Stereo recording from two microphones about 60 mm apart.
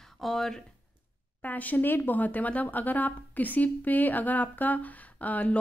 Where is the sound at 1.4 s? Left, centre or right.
Left.